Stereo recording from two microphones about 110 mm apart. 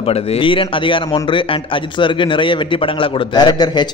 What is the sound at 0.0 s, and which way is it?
A man's voice, 60° left (ahead or behind).